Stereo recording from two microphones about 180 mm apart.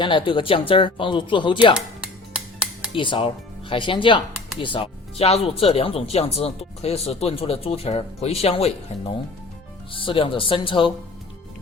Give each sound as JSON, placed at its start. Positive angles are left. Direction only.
{"t": 0.0, "sound": "speech", "side_deg": 25}
{"t": 2.3, "sound": "a sound", "side_deg": -5}
{"t": 2.9, "sound": "speech", "side_deg": 30}
{"t": 9.9, "sound": "speech", "side_deg": 30}